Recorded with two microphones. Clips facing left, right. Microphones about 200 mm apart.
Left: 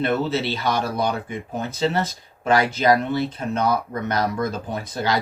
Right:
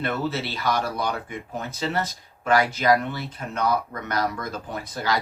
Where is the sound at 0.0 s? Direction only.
25° left (ahead or behind).